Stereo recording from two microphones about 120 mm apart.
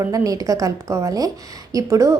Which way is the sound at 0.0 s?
30° right (ahead or behind).